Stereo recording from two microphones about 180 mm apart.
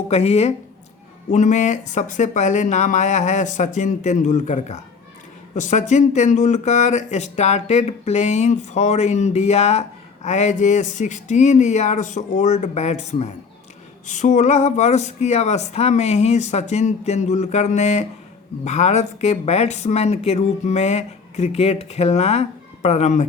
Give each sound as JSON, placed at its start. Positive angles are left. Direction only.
{"t": 0.1, "sound": "speech", "side_deg": 35}